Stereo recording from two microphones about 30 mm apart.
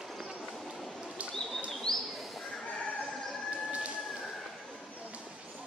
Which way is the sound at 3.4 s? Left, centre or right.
Right.